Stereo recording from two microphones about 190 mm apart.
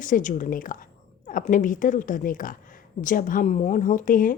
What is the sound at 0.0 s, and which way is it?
Speech, 45° left (ahead or behind).